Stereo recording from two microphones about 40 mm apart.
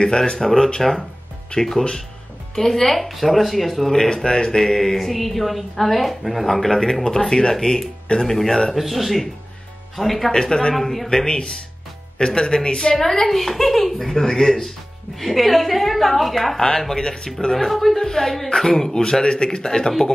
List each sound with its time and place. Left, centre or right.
0.4 s speech: centre
3.9 s speech: centre
8.7 s speech: centre
10.3 s speech: centre
10.7 s speech: centre
11.1 s speech: centre
13.9 s speech: centre
16.6 s speech: centre